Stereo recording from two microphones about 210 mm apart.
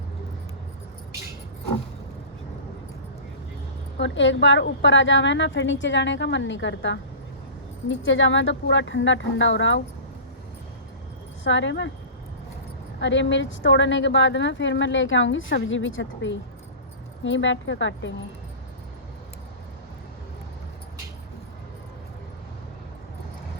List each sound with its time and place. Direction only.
3.9 s a woman's voice: 60° left (ahead or behind)
11.4 s a woman's voice: 60° left (ahead or behind)
13.0 s a woman's voice: 60° left (ahead or behind)